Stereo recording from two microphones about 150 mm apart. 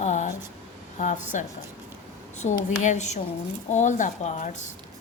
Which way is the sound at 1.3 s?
55° left (ahead or behind).